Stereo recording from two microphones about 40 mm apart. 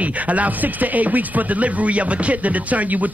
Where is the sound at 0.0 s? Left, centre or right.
Right.